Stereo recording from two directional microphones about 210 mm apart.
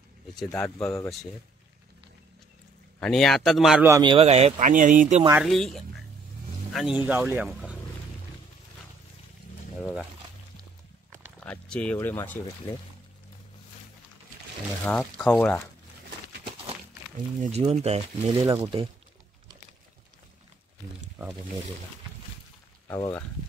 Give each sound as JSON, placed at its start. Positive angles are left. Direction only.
{"t": 0.4, "sound": "speech", "side_deg": 15}
{"t": 3.0, "sound": "speech", "side_deg": 0}
{"t": 3.8, "sound": "speech", "side_deg": -20}
{"t": 5.3, "sound": "speech", "side_deg": 0}
{"t": 11.3, "sound": "speech", "side_deg": 5}
{"t": 14.9, "sound": "speech", "side_deg": 5}
{"t": 17.4, "sound": "speech", "side_deg": -30}
{"t": 21.2, "sound": "wild animals", "side_deg": -15}
{"t": 22.8, "sound": "speech", "side_deg": 15}